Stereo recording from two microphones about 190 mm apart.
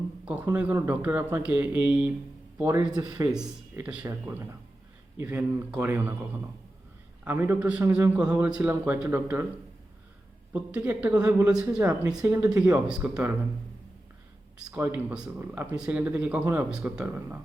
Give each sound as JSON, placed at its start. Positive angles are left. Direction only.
{"t": 0.3, "sound": "a man's voice", "side_deg": -10}
{"t": 3.3, "sound": "a man's voice", "side_deg": -5}
{"t": 7.3, "sound": "a man's voice", "side_deg": -10}
{"t": 10.5, "sound": "a man's voice", "side_deg": -5}
{"t": 14.6, "sound": "a man's voice", "side_deg": -10}